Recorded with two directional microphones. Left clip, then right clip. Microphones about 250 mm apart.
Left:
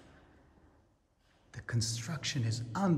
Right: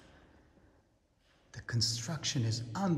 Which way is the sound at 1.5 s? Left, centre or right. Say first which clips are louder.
Right 4 dB; centre.